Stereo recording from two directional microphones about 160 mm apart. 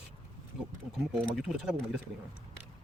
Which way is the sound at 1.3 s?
5° right (ahead or behind).